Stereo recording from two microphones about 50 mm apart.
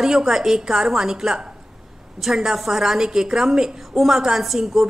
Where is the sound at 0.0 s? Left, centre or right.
Centre.